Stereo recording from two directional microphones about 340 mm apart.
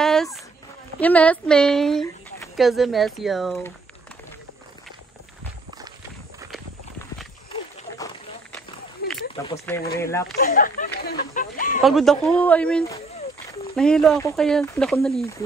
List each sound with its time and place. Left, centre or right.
0.0 s a sound: centre
1.0 s speech: centre
6.5 s clip-clop: centre
7.5 s a sound: centre
9.3 s speech: centre
10.3 s speech: left
11.8 s speech: centre